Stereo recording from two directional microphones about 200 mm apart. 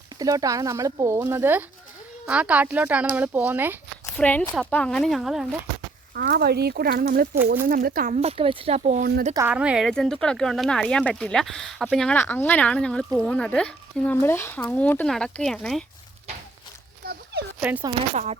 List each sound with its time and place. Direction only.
0.2 s speech: 15° right (ahead or behind)
4.0 s speech: 10° left (ahead or behind)
6.1 s speech: 50° right (ahead or behind); by 9.0 s 35° right (ahead or behind)
9.3 s speech: 10° right (ahead or behind)
17.0 s a sound: 50° right (ahead or behind)
17.6 s speech: 10° right (ahead or behind)
18.1 s speech: 35° right (ahead or behind)